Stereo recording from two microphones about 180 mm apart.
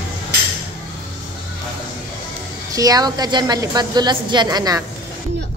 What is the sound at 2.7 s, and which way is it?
A woman's voice, 20° right (ahead or behind).